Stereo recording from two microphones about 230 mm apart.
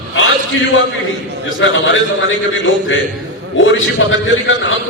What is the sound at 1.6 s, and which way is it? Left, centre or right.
Speech, left.